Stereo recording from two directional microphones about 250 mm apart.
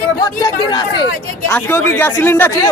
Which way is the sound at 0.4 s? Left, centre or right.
Centre.